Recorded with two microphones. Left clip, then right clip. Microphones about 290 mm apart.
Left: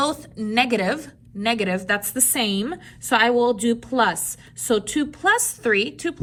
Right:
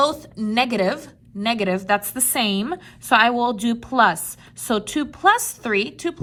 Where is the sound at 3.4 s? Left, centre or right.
Centre.